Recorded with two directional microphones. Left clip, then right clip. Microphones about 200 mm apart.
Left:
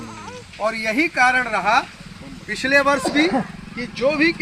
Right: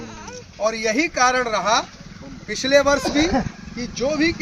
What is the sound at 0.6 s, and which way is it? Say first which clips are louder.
A man's voice: even; 35° right (ahead or behind).